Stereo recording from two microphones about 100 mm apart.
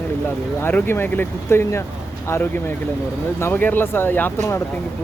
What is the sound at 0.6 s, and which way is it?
Speech, 20° left (ahead or behind).